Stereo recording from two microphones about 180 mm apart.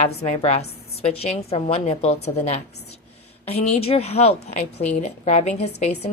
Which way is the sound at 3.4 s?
35° left (ahead or behind).